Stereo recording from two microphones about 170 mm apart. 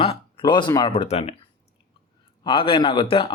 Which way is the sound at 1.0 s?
40° left (ahead or behind).